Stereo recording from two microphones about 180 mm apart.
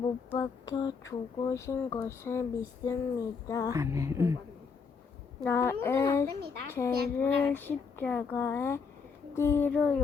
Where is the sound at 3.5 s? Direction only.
20° left (ahead or behind).